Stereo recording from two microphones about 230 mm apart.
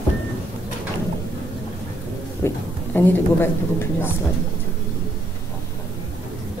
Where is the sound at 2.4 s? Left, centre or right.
Centre.